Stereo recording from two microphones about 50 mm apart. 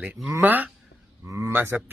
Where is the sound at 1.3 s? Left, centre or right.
Right.